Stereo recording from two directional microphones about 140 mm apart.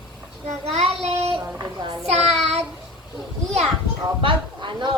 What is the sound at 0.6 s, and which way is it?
Child singing, 45° right (ahead or behind).